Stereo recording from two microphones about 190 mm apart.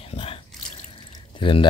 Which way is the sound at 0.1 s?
30° left (ahead or behind).